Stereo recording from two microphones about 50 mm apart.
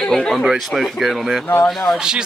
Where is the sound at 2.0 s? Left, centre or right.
Centre.